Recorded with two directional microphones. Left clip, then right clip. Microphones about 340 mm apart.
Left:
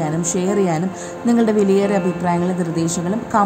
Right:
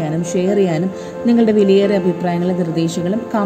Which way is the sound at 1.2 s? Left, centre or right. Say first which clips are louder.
Right 3 dB; left.